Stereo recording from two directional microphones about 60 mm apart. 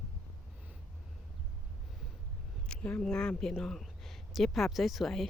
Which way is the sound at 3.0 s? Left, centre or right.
Centre.